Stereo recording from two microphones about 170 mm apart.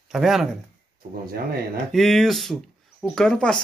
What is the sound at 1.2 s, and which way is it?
Speech, 65° right (ahead or behind).